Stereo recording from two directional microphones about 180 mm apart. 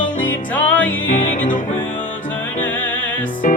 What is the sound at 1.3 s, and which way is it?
Music, 45° left (ahead or behind).